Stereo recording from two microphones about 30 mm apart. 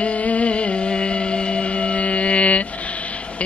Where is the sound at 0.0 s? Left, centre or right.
Left.